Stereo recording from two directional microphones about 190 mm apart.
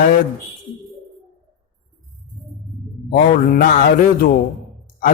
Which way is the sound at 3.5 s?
45° left (ahead or behind).